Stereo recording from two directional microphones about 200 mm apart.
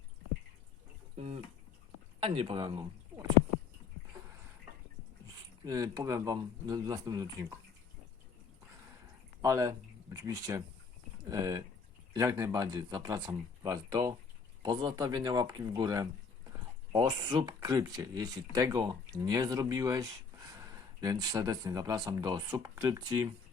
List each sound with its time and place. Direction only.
1.1 s a sound: 30° right (ahead or behind)
2.2 s speech: 25° right (ahead or behind)
5.6 s speech: 15° right (ahead or behind)
9.4 s speech: 15° right (ahead or behind)